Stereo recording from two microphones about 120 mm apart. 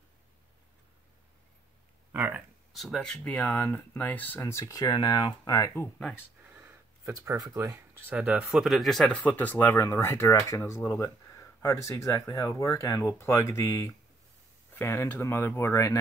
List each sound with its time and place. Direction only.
2.1 s speech: 15° right (ahead or behind)
2.7 s speech: centre (ahead or behind); by 5.7 s 30° left (ahead or behind)
6.4 s a sound: 20° right (ahead or behind)
8.1 s speech: 10° right (ahead or behind)
9.3 s speech: 15° left (ahead or behind)